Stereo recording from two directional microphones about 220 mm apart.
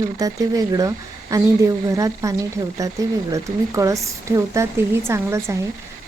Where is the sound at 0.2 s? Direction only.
15° right (ahead or behind).